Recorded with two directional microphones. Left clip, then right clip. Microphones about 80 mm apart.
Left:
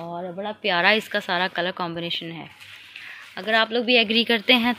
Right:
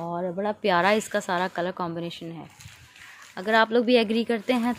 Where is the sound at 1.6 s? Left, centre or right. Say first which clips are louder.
Left 3 dB; right.